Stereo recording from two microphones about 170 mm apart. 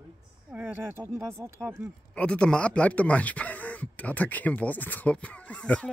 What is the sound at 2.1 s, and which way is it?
Speech, 5° left (ahead or behind).